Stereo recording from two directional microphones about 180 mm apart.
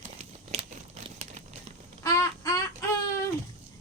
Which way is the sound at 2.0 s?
15° left (ahead or behind).